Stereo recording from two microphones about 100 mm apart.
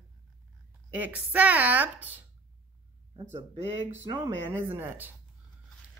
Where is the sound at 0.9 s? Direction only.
15° right (ahead or behind).